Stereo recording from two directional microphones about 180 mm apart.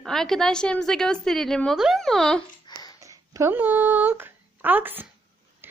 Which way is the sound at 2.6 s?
20° left (ahead or behind).